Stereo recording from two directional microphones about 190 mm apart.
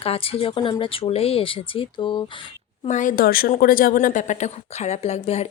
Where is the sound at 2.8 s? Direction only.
40° left (ahead or behind).